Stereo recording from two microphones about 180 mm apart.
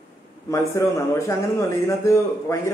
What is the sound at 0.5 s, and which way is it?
A man's voice, 15° left (ahead or behind).